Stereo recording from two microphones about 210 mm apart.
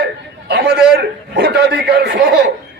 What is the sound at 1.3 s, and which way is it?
Speech, 55° right (ahead or behind).